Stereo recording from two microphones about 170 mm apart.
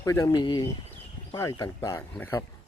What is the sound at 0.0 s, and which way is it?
Speech, 20° left (ahead or behind).